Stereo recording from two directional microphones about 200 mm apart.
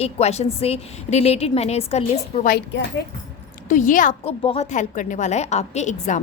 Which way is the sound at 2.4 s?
50° left (ahead or behind).